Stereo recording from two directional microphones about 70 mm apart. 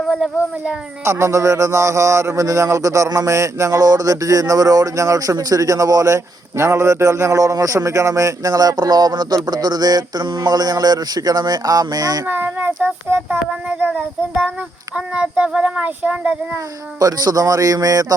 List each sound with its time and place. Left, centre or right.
1.0 s a man's voice: right
12.2 s child singing: right
13.7 s a child's voice: centre
17.0 s speech: right